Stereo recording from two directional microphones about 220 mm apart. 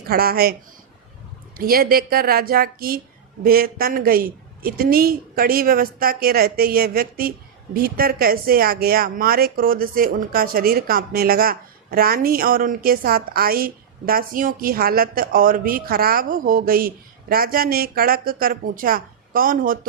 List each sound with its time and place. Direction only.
0.1 s speech: 45° right (ahead or behind)
1.5 s a woman's voice: 40° right (ahead or behind)